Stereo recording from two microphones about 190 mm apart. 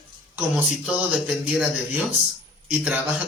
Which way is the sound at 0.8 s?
5° right (ahead or behind).